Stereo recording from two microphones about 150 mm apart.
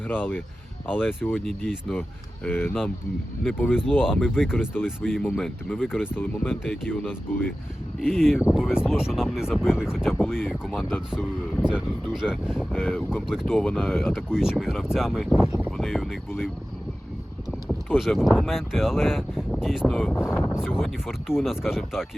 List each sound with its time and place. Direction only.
0.1 s speech: 10° left (ahead or behind)
1.5 s speech: centre (ahead or behind)
17.7 s speech: centre (ahead or behind)
20.3 s speech: 15° left (ahead or behind)
20.6 s speech: centre (ahead or behind)